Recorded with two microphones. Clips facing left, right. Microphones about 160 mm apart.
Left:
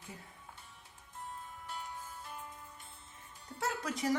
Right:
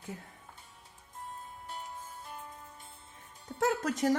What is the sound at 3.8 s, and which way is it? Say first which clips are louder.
Music: right 6 dB; 45° right (ahead or behind).